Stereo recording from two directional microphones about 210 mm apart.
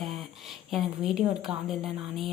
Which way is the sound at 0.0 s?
Centre (ahead or behind).